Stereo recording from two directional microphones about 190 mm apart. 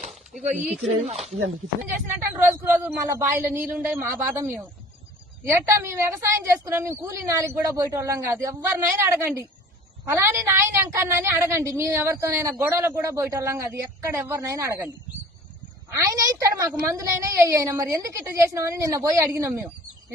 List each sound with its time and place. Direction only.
0.6 s speech: 5° right (ahead or behind)
1.0 s speech: 35° right (ahead or behind)
2.1 s a woman's voice: 10° right (ahead or behind)
16.0 s a woman's voice: 15° right (ahead or behind)